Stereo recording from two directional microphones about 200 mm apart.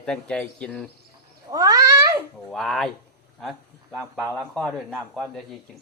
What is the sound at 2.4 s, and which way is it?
Speech, centre (ahead or behind).